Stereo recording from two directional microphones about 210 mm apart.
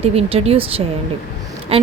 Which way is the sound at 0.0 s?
30° right (ahead or behind).